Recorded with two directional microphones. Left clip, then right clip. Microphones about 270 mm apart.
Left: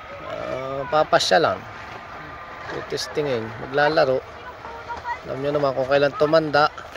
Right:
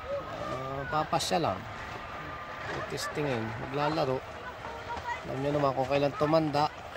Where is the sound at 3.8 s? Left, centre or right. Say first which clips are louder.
Left 12 dB; centre.